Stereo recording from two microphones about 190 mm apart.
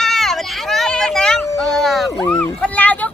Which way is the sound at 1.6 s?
Centre (ahead or behind).